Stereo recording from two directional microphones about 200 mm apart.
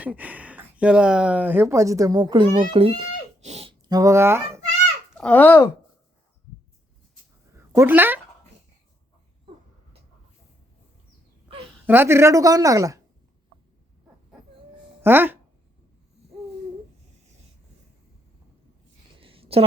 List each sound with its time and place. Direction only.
0.0 s speech: 5° right (ahead or behind); by 2.6 s 25° right (ahead or behind)
2.7 s a sound: 30° right (ahead or behind); by 4.6 s 10° right (ahead or behind)
5.1 s speech: 5° left (ahead or behind)
7.5 s speech: 10° right (ahead or behind)
11.9 s speech: 10° right (ahead or behind)
15.0 s speech: 10° right (ahead or behind)
19.2 s a sound: 25° right (ahead or behind)